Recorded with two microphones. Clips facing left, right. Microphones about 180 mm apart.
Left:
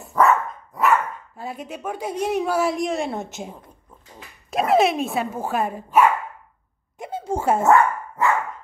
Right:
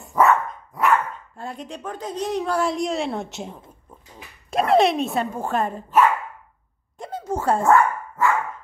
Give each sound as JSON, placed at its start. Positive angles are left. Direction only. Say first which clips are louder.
{"t": 0.2, "sound": "dog", "louder": "even", "side_deg": 0}
{"t": 1.3, "sound": "a woman's voice", "louder": "left 1 dB", "side_deg": 5}
{"t": 7.0, "sound": "a sound", "louder": "left 1 dB", "side_deg": 25}
{"t": 7.4, "sound": "dog", "louder": "left 1 dB", "side_deg": 20}